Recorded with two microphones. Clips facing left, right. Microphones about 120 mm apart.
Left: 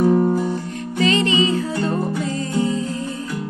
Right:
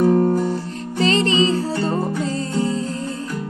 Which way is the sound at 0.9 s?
35° right (ahead or behind).